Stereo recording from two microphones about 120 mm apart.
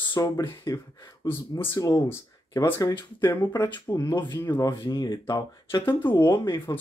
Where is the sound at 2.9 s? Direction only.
35° left (ahead or behind).